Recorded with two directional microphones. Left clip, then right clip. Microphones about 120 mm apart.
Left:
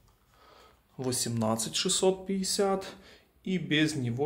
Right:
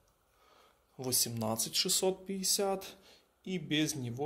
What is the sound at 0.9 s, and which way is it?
Speech, 35° right (ahead or behind).